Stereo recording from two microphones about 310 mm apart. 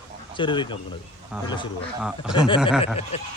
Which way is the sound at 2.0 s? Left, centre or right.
Centre.